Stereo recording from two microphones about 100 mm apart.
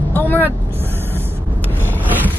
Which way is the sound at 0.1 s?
20° left (ahead or behind).